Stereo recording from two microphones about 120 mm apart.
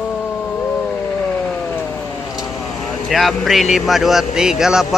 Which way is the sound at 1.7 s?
15° left (ahead or behind).